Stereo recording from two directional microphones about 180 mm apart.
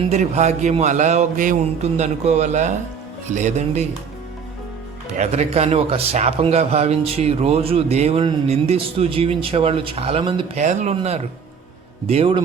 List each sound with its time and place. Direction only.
0.0 s a man's voice: 40° right (ahead or behind)
5.1 s a man's voice: 40° right (ahead or behind)
10.6 s a man's voice: 40° right (ahead or behind)